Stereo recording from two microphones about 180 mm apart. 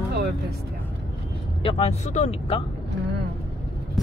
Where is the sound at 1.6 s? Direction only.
35° left (ahead or behind).